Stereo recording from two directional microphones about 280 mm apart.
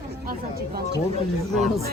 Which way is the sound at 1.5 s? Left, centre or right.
Centre.